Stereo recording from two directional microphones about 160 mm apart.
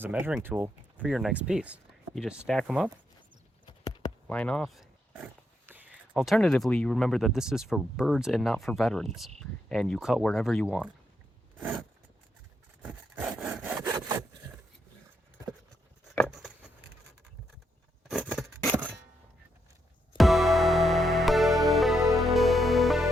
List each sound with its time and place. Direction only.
0.0 s speech: 10° right (ahead or behind)
3.7 s a sound: 25° left (ahead or behind)
4.3 s speech: 5° left (ahead or behind)
12.8 s sawing: 10° right (ahead or behind)
16.3 s a sound: centre (ahead or behind)
18.3 s scissors: centre (ahead or behind)
20.1 s music: centre (ahead or behind)